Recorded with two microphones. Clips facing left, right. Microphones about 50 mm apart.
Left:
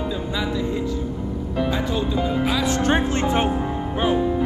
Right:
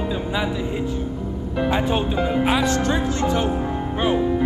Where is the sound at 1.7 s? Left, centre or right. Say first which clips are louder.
Right 5 dB; right.